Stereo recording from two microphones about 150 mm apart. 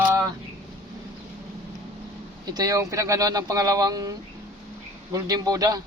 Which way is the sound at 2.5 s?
25° right (ahead or behind).